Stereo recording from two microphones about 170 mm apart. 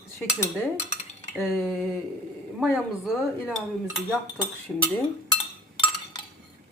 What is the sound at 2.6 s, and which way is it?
Dishes, centre (ahead or behind).